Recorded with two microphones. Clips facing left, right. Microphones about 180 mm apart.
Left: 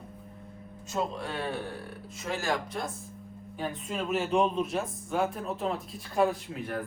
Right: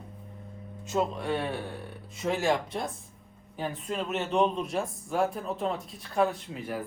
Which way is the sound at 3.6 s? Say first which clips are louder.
Right 1 dB; centre (ahead or behind).